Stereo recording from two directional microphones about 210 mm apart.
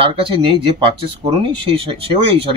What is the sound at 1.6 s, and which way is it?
Speech, 25° right (ahead or behind).